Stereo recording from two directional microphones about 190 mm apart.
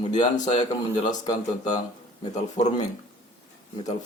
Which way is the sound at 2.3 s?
35° left (ahead or behind).